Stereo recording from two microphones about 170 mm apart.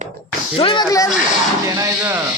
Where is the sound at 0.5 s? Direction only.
30° left (ahead or behind).